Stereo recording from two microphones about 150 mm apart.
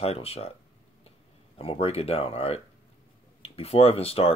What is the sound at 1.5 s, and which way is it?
Speech, 40° left (ahead or behind).